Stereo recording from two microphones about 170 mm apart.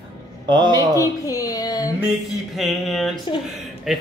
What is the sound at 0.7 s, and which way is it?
Speech, 20° left (ahead or behind).